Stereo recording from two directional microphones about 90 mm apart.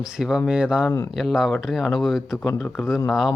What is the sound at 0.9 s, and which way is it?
Speech, 35° left (ahead or behind).